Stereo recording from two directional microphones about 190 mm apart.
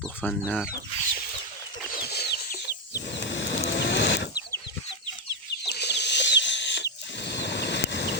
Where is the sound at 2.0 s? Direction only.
60° left (ahead or behind).